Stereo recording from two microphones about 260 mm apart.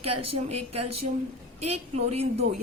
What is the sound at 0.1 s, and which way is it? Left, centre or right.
A woman's voice, right.